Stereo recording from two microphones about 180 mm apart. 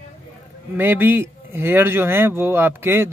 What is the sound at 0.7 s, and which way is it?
Speech, 10° right (ahead or behind).